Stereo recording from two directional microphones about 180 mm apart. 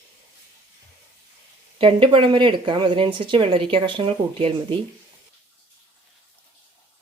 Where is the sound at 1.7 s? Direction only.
30° right (ahead or behind).